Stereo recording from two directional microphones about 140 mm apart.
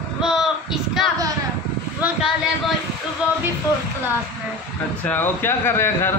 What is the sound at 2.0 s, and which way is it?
Speech, 10° right (ahead or behind).